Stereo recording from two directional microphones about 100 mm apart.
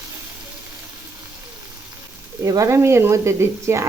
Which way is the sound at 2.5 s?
30° right (ahead or behind).